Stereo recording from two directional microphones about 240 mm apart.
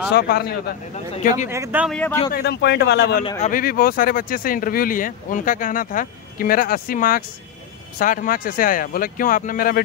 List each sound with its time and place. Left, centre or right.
0.1 s speech: left
0.9 s speech: left
1.5 s speech: centre
2.3 s a man's voice: left
3.3 s speech: left